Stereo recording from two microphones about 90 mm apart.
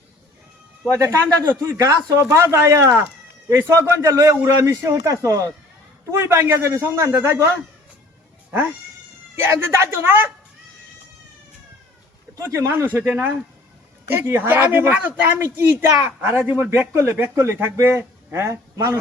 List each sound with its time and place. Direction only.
0.9 s a man's voice: 35° right (ahead or behind)
9.3 s speech: 30° right (ahead or behind)
12.4 s speech: 30° right (ahead or behind)